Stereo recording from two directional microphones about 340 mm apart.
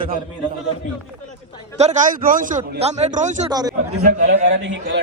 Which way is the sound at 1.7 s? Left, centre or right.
Right.